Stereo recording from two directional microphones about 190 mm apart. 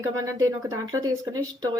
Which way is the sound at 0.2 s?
15° right (ahead or behind).